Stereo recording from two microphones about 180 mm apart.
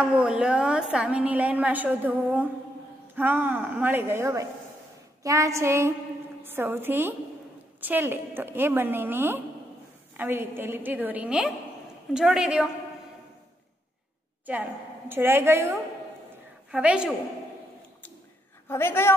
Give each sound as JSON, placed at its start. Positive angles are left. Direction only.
{"t": 0.0, "sound": "a woman's voice", "side_deg": -5}
{"t": 14.4, "sound": "a woman's voice", "side_deg": -10}
{"t": 16.7, "sound": "a woman's voice", "side_deg": -5}
{"t": 18.7, "sound": "a woman's voice", "side_deg": 15}